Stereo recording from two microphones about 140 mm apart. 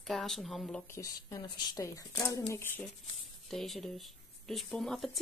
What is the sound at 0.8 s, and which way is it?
A woman's voice, 20° left (ahead or behind).